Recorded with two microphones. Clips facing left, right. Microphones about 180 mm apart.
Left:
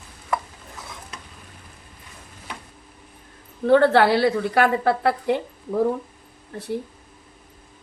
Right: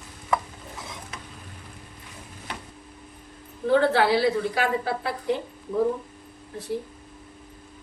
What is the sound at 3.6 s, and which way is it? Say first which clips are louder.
A woman's voice: left 5 dB; 65° left (ahead or behind).